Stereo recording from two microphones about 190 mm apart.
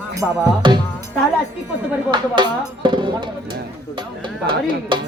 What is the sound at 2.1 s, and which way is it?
Speech, 25° right (ahead or behind).